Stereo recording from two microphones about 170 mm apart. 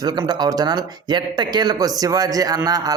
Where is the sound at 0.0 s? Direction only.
25° right (ahead or behind).